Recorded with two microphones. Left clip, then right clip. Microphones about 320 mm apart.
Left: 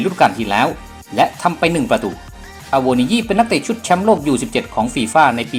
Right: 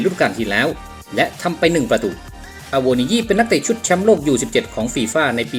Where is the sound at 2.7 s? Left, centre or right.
Left.